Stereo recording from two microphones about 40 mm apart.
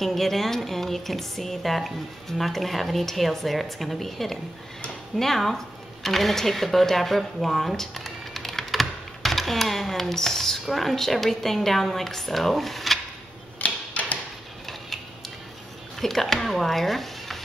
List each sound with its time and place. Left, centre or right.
0.0 s speech: centre
13.6 s a sound: left
16.0 s speech: centre